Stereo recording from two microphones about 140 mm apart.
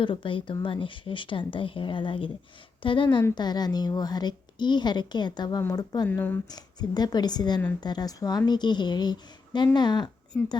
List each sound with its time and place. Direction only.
0.0 s a woman's voice: 35° left (ahead or behind)
6.1 s speech: 15° left (ahead or behind)
6.5 s a woman's voice: 30° left (ahead or behind)
10.3 s speech: 20° left (ahead or behind)